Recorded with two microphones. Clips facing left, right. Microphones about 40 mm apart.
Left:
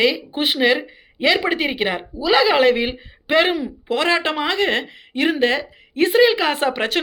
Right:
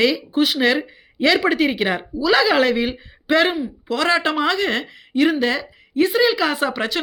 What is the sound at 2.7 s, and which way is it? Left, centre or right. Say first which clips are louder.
Speech: even; left.